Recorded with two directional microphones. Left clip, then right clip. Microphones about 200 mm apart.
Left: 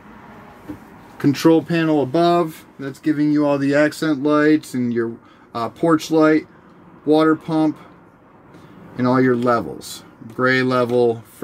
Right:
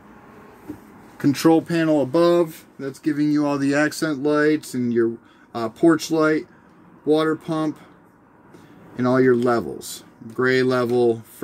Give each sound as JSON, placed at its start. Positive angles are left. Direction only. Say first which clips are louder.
{"t": 1.1, "sound": "speech", "louder": "left 2 dB", "side_deg": -30}
{"t": 8.9, "sound": "speech", "louder": "even", "side_deg": -30}